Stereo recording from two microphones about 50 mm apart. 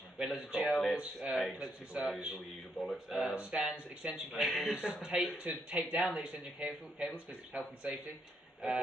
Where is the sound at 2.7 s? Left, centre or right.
Centre.